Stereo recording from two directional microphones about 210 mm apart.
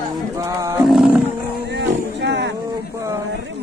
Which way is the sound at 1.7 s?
55° right (ahead or behind).